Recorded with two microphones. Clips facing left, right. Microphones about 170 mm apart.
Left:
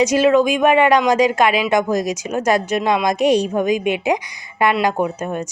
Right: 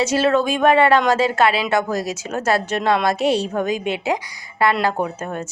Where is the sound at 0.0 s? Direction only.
15° left (ahead or behind).